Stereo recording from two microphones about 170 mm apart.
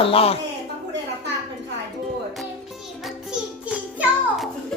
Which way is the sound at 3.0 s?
5° right (ahead or behind).